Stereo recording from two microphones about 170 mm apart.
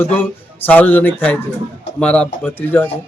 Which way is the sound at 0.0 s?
10° left (ahead or behind).